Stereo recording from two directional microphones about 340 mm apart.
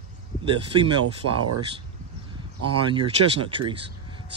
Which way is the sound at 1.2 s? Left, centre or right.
Right.